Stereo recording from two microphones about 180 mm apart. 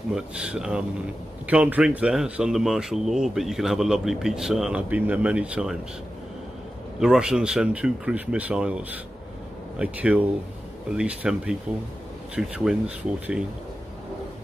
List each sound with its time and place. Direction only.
0.1 s speech: 5° right (ahead or behind)
7.0 s speech: 5° right (ahead or behind)